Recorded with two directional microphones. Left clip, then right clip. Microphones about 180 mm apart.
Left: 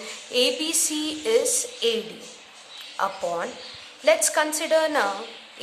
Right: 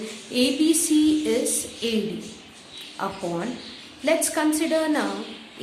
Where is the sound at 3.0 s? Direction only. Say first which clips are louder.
Left 3 dB; 35° left (ahead or behind).